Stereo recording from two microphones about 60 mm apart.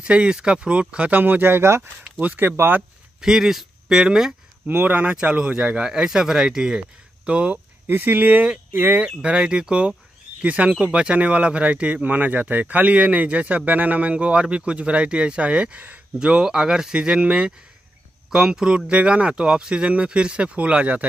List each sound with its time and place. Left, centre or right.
0.0 s speech: centre; by 2.8 s right
3.2 s speech: centre
4.6 s speech: right
5.0 s speech: centre
7.2 s speech: right
7.8 s speech: right
9.0 s speech: centre
16.2 s speech: centre